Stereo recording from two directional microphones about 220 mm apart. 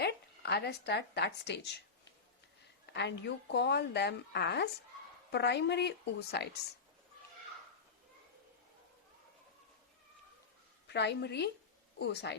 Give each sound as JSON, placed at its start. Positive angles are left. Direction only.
{"t": 0.0, "sound": "speech", "side_deg": 50}
{"t": 2.8, "sound": "speech", "side_deg": 50}
{"t": 10.8, "sound": "speech", "side_deg": 50}